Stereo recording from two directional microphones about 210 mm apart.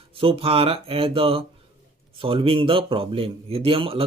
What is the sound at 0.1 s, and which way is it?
A man's voice, 25° right (ahead or behind).